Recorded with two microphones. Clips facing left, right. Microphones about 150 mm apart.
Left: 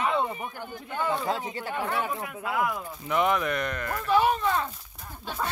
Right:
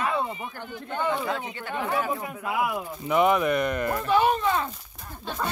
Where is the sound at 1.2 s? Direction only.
35° left (ahead or behind).